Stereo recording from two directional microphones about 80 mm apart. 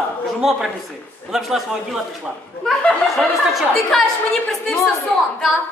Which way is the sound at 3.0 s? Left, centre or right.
Centre.